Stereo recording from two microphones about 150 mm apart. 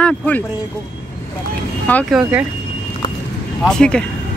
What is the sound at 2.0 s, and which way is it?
Speech, 5° right (ahead or behind).